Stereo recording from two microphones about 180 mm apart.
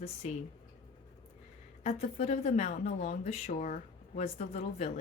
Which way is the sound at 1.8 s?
35° left (ahead or behind).